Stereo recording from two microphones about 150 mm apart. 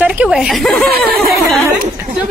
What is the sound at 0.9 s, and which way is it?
Speech, 90° right.